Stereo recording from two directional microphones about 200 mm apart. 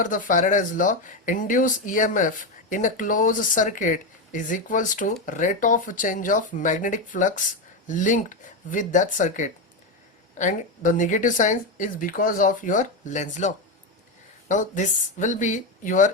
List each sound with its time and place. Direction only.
0.0 s speech: 40° left (ahead or behind)